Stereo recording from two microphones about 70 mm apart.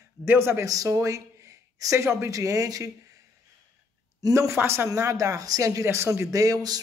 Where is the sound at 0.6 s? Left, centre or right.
Right.